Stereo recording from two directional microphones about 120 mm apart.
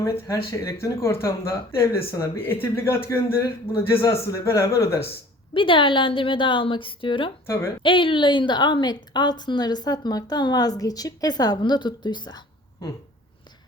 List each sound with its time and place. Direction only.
0.0 s speech: 20° left (ahead or behind)
5.5 s a woman's voice: 45° left (ahead or behind)